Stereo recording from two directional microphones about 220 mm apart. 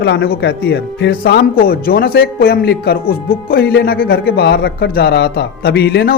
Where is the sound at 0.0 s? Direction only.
50° left (ahead or behind).